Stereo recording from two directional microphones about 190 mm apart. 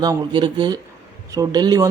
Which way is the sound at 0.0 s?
25° right (ahead or behind).